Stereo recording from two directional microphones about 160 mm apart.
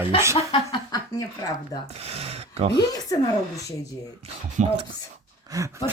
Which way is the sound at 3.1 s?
20° left (ahead or behind).